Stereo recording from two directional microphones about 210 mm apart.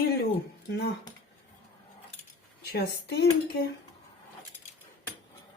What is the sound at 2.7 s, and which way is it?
Speech, 50° left (ahead or behind).